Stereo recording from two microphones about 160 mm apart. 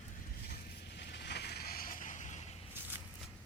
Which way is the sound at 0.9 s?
90° left.